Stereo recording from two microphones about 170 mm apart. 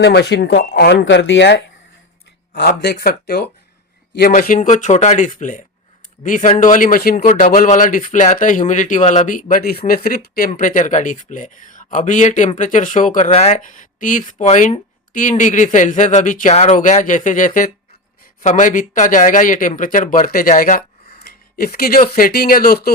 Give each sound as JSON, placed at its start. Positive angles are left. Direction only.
{"t": 0.0, "sound": "speech", "side_deg": 80}
{"t": 2.6, "sound": "speech", "side_deg": 75}
{"t": 4.2, "sound": "a man's voice", "side_deg": 55}